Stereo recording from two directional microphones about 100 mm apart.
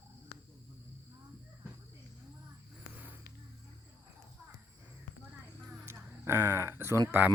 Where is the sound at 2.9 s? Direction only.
15° right (ahead or behind).